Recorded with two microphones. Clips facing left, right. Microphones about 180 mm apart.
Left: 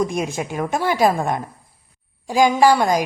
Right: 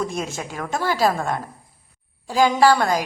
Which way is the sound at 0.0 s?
15° left (ahead or behind).